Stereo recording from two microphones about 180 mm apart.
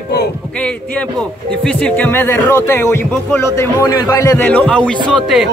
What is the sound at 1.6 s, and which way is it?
Speech, 5° left (ahead or behind).